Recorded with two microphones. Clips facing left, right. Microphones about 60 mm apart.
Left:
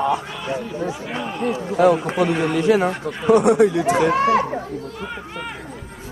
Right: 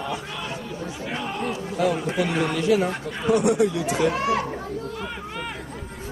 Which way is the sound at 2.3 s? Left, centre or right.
Centre.